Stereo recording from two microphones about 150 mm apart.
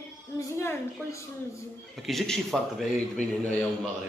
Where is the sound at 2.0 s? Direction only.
Centre (ahead or behind).